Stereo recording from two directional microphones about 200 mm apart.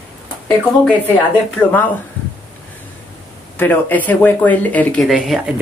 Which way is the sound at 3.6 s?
10° left (ahead or behind).